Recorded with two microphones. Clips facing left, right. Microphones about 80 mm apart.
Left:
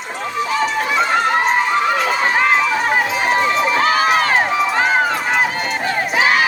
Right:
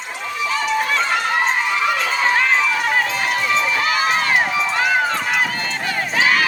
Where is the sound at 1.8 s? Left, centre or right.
Left.